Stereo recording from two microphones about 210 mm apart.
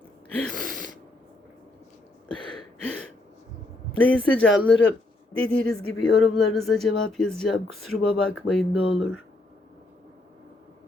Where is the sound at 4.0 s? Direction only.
5° left (ahead or behind).